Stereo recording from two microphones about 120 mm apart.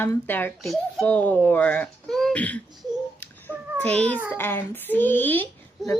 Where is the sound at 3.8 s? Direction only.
10° left (ahead or behind).